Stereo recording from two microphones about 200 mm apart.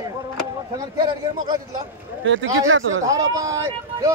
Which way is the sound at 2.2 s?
75° right (ahead or behind).